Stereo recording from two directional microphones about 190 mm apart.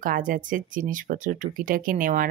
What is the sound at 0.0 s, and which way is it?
Speech, 45° right (ahead or behind).